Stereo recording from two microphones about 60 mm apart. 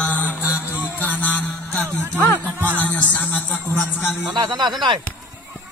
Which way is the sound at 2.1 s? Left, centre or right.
Left.